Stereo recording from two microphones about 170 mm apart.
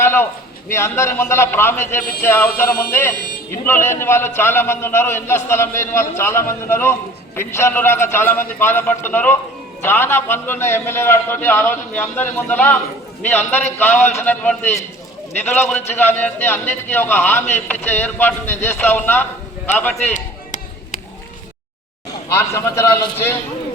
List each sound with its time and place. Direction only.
0.0 s a man's voice: 15° left (ahead or behind)
20.1 s a sound: 45° left (ahead or behind)
22.3 s a man's voice: 15° left (ahead or behind)